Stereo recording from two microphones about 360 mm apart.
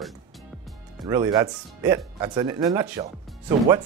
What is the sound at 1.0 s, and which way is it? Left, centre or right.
Speech, centre.